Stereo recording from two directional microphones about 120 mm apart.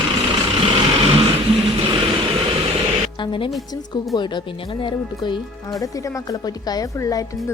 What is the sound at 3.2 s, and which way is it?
Speech, 45° left (ahead or behind).